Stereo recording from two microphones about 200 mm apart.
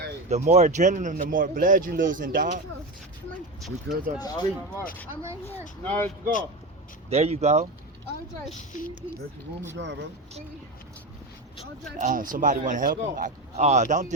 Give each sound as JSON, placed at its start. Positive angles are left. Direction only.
{"t": 0.3, "sound": "a man's voice", "side_deg": -35}
{"t": 3.9, "sound": "speech", "side_deg": -55}
{"t": 4.2, "sound": "speech", "side_deg": 20}
{"t": 5.8, "sound": "speech", "side_deg": 10}
{"t": 7.1, "sound": "a man's voice", "side_deg": -30}
{"t": 9.7, "sound": "speech", "side_deg": -60}
{"t": 11.9, "sound": "a man's voice", "side_deg": -40}